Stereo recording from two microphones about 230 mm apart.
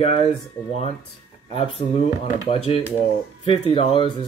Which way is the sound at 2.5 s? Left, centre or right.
Left.